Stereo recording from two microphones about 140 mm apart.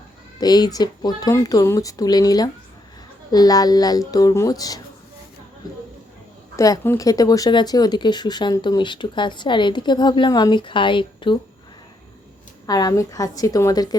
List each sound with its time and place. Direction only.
0.3 s speech: 30° left (ahead or behind)
6.6 s speech: 25° left (ahead or behind)
12.6 s speech: 25° left (ahead or behind)